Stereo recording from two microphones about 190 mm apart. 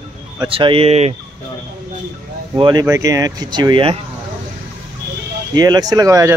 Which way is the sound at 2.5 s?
20° right (ahead or behind).